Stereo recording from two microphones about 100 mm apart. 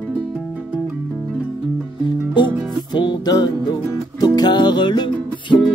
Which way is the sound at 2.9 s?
45° left (ahead or behind).